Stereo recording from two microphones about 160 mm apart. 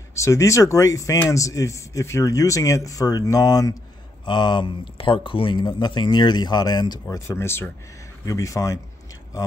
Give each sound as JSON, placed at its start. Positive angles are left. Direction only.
{"t": 0.1, "sound": "speech", "side_deg": 20}